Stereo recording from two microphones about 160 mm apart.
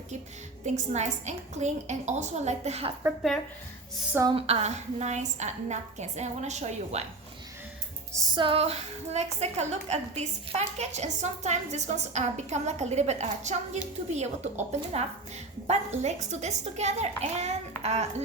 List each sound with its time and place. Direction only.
0.6 s a woman's voice: 45° right (ahead or behind)
4.3 s a woman's voice: 40° right (ahead or behind)
8.1 s music: 20° right (ahead or behind)
8.4 s a woman's voice: 40° right (ahead or behind)